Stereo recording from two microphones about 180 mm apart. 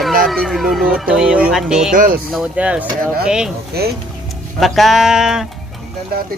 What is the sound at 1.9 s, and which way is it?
Speech, 50° right (ahead or behind).